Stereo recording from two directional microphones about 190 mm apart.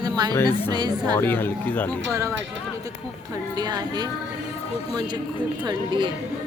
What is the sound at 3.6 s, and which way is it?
Speech, 20° right (ahead or behind).